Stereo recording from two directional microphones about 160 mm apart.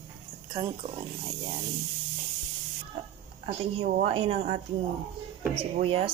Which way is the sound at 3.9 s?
35° right (ahead or behind).